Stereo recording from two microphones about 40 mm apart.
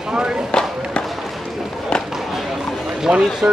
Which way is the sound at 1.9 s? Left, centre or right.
Left.